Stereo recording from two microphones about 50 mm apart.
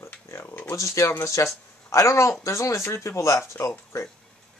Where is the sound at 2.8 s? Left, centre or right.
Left.